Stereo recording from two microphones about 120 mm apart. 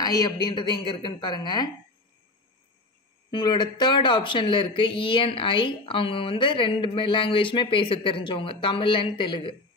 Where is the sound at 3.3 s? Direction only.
35° left (ahead or behind).